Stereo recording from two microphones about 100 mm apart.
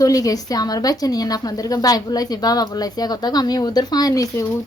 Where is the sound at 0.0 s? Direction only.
35° left (ahead or behind).